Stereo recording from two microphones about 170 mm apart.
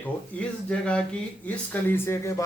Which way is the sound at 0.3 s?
5° left (ahead or behind).